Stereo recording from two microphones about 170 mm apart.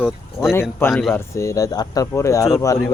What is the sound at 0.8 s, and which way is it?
Speech, 15° left (ahead or behind).